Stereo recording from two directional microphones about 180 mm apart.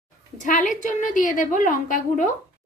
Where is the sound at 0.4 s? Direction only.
45° left (ahead or behind).